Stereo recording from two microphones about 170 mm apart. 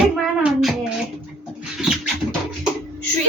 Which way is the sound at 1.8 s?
5° right (ahead or behind).